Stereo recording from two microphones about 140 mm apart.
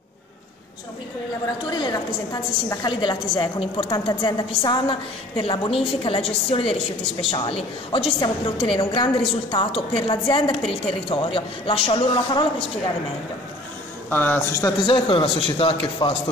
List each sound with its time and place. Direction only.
1.7 s a woman's voice: 30° left (ahead or behind)
14.1 s a man's voice: 15° left (ahead or behind)
14.9 s a woman's voice: 35° left (ahead or behind)